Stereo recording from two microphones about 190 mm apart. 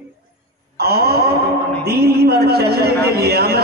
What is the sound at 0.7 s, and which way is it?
A man's voice, 55° right (ahead or behind).